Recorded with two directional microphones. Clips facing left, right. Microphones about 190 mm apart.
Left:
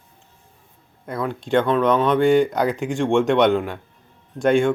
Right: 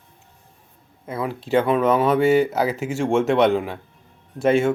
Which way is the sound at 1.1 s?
5° right (ahead or behind).